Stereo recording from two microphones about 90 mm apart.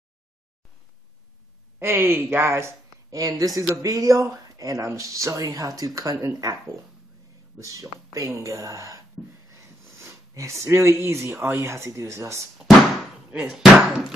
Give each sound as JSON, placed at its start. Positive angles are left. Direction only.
{"t": 1.8, "sound": "speech", "side_deg": -25}
{"t": 7.5, "sound": "speech", "side_deg": -40}
{"t": 9.9, "sound": "sniff", "side_deg": -35}
{"t": 11.1, "sound": "speech", "side_deg": -30}
{"t": 13.5, "sound": "speech", "side_deg": -5}